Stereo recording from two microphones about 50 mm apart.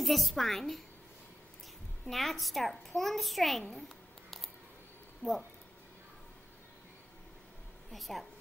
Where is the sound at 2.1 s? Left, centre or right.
Centre.